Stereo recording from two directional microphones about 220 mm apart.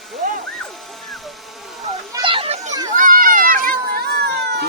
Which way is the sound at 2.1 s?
25° right (ahead or behind).